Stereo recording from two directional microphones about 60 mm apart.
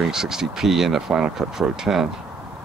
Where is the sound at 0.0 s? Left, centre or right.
Centre.